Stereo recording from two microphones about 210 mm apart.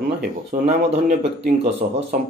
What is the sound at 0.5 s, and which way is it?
Speech, 40° right (ahead or behind).